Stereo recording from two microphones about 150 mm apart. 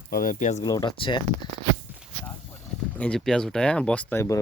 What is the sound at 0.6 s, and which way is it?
Speech, 25° left (ahead or behind).